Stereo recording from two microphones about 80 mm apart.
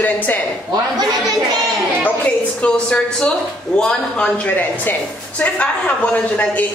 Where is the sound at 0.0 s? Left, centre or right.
Left.